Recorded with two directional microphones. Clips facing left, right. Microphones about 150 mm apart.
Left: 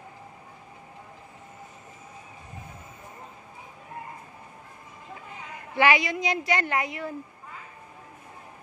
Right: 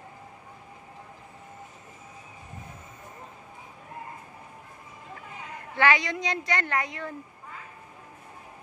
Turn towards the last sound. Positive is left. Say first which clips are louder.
# left 2 dB
turn(degrees=10)  # may be behind; listen again after turning